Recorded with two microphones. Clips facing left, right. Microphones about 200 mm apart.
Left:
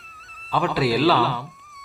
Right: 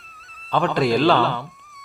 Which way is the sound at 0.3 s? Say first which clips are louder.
Right 2 dB; 5° left (ahead or behind).